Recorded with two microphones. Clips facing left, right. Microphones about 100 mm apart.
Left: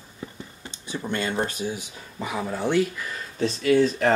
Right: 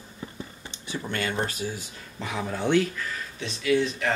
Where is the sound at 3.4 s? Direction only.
40° left (ahead or behind).